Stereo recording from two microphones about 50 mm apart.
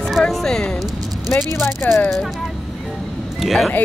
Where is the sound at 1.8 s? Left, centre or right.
Left.